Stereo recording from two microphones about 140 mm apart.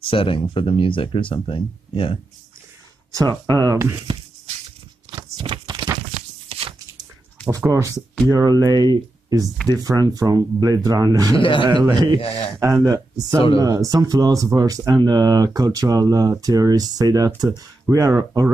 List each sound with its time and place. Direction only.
0.0 s speech: 40° left (ahead or behind)
3.4 s speech: 25° right (ahead or behind)
5.1 s a sound: 30° right (ahead or behind)
6.5 s a sound: 40° right (ahead or behind)
7.4 s speech: 20° right (ahead or behind)
11.3 s speech: 35° left (ahead or behind)
12.5 s speech: 25° right (ahead or behind)